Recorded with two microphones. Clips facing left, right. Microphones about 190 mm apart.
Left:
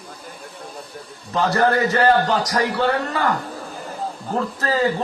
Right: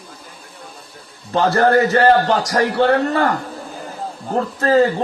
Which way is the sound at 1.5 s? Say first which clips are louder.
Right 4 dB; 50° right (ahead or behind).